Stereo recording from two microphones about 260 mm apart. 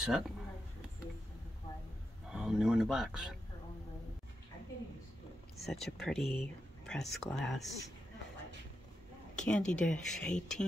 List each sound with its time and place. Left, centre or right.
0.0 s speech: centre
2.3 s speech: centre
5.7 s speech: centre
9.3 s speech: centre